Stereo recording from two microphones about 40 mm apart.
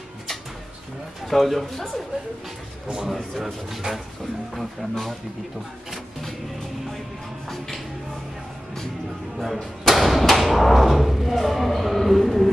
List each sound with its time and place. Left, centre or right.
1.2 s speech: centre
3.0 s speech: centre
7.4 s music: centre
9.4 s door: centre